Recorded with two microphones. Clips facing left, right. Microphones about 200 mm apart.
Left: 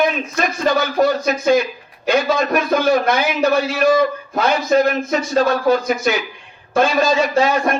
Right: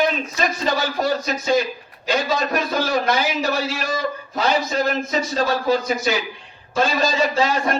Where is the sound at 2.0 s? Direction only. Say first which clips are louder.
Left 5 dB; 55° left (ahead or behind).